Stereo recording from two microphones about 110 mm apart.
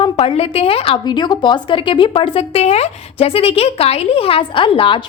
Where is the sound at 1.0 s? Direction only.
40° left (ahead or behind).